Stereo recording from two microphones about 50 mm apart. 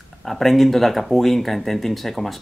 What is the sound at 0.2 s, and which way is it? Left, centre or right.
Speech, centre.